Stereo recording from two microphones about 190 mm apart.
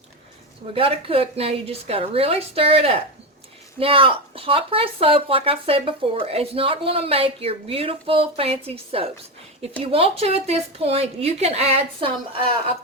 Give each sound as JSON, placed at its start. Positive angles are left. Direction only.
{"t": 0.7, "sound": "a woman's voice", "side_deg": -30}